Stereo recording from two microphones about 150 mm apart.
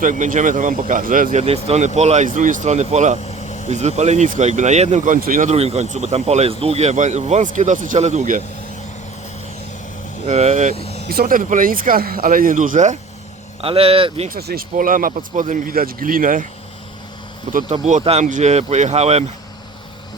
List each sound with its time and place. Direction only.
0.0 s speech: 60° right (ahead or behind)
5.5 s speech: 45° right (ahead or behind)
10.2 s speech: 50° right (ahead or behind)
10.8 s vehicle: 40° left (ahead or behind)
11.1 s speech: 80° right; by 13.0 s 55° right (ahead or behind)
13.6 s speech: 40° right (ahead or behind)
14.3 s speech: 85° right; by 16.5 s 65° right (ahead or behind)
17.5 s speech: 55° right (ahead or behind)